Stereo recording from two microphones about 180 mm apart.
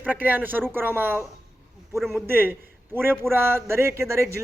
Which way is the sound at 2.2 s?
10° right (ahead or behind).